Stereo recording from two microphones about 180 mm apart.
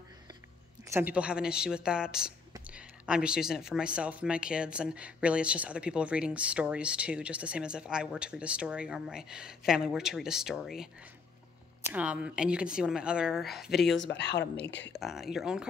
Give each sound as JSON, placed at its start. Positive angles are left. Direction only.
{"t": 0.8, "sound": "speech", "side_deg": -10}
{"t": 11.9, "sound": "speech", "side_deg": -5}
{"t": 13.9, "sound": "speech", "side_deg": 75}
{"t": 15.0, "sound": "speech", "side_deg": 0}